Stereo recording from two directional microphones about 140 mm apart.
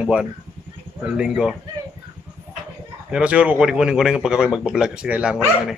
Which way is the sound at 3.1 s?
10° right (ahead or behind).